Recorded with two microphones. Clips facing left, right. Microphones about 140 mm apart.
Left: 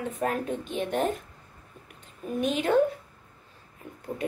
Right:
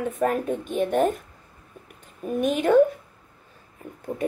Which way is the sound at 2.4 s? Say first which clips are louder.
Right 4 dB; 50° right (ahead or behind).